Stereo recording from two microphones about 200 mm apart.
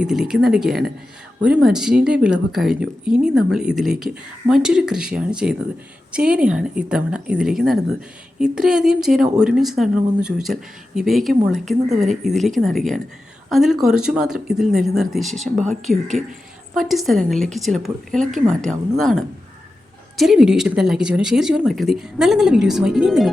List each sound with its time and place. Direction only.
0.0 s speech: centre (ahead or behind)
11.9 s speech: 35° right (ahead or behind)
12.2 s speech: centre (ahead or behind)